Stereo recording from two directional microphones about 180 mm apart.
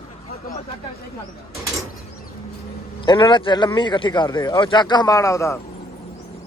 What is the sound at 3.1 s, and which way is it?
Speech, 25° left (ahead or behind).